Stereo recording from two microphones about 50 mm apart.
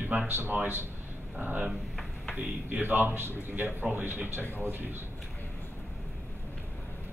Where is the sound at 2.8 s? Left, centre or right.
Right.